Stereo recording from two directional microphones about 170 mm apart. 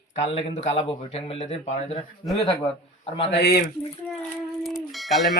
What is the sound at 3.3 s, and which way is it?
Speech, 75° left (ahead or behind).